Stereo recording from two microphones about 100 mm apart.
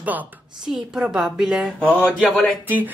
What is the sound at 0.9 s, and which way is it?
Speech, 5° right (ahead or behind).